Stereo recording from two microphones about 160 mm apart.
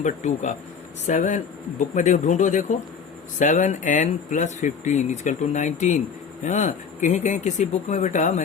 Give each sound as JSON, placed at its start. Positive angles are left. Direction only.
{"t": 0.0, "sound": "speech", "side_deg": 50}